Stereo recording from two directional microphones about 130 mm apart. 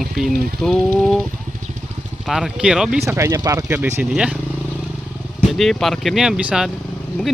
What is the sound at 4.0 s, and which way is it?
Speech, 5° right (ahead or behind).